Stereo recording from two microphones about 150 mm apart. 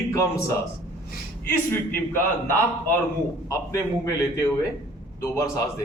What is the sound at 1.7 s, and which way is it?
A man's voice, 15° left (ahead or behind).